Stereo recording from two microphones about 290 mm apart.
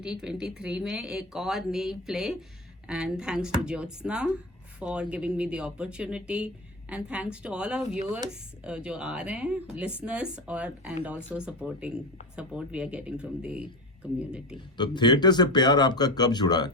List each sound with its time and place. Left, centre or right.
0.0 s speech: centre
14.8 s speech: centre